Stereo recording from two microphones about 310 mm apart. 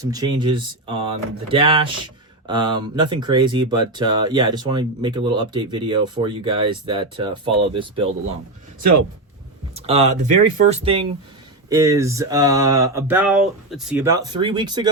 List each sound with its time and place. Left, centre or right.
0.0 s speech: centre
8.8 s speech: right
9.7 s speech: centre